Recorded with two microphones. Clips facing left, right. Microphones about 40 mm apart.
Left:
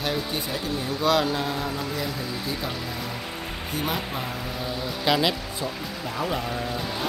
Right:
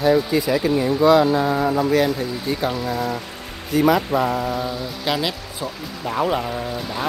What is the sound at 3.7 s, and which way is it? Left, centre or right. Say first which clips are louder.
Speech: right 13 dB; right.